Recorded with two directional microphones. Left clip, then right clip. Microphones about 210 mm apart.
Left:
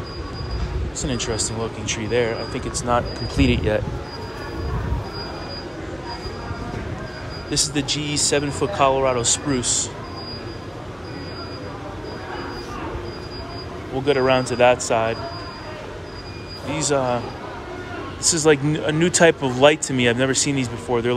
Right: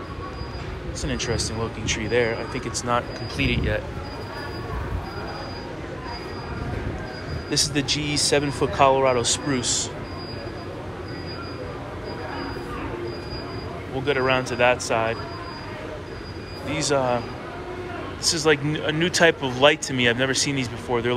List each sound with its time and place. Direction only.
1.0 s speech: 20° left (ahead or behind)
3.4 s speech: 40° left (ahead or behind)
7.5 s speech: 15° left (ahead or behind)
14.0 s speech: 25° left (ahead or behind)
16.6 s speech: 20° left (ahead or behind)
18.3 s speech: 30° left (ahead or behind)